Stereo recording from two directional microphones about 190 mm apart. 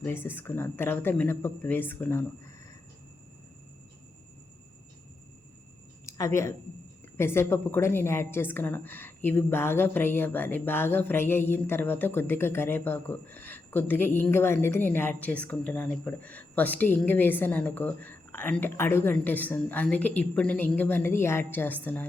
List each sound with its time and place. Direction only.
0.0 s a woman's voice: 10° left (ahead or behind)
6.1 s a woman's voice: 15° left (ahead or behind)